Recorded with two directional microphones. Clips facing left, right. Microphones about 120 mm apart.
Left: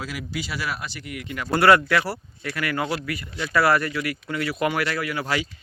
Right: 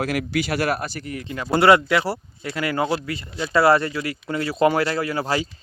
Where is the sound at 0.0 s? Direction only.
60° right (ahead or behind).